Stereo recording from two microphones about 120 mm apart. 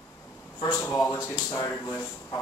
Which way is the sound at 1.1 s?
25° left (ahead or behind).